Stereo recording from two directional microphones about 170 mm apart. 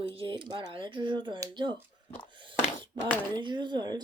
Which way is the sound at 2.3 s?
30° right (ahead or behind).